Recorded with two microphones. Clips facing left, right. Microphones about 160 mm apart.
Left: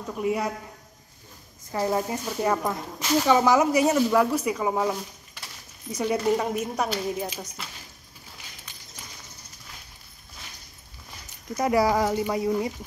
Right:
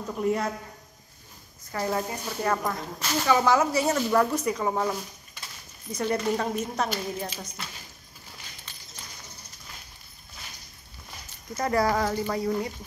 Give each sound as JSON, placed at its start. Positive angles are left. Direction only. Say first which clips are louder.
{"t": 0.2, "sound": "speech", "louder": "even", "side_deg": 5}
{"t": 1.7, "sound": "speech", "louder": "left 3 dB", "side_deg": 15}
{"t": 5.9, "sound": "speech", "louder": "left 3 dB", "side_deg": 10}
{"t": 11.5, "sound": "speech", "louder": "left 3 dB", "side_deg": 10}